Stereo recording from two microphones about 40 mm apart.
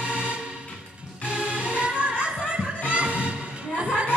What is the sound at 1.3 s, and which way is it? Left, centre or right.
Music, right.